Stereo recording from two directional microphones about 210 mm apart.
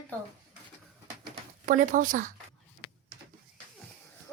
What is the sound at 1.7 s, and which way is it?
Speech, 40° right (ahead or behind).